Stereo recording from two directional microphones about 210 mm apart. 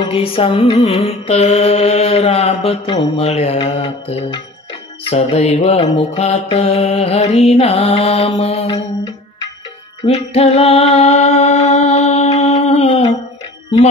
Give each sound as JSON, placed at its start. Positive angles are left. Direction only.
{"t": 0.0, "sound": "mantra", "side_deg": 25}
{"t": 10.0, "sound": "music", "side_deg": 30}